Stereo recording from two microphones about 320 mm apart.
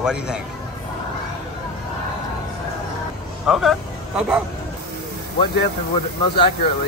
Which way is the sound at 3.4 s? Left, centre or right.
Centre.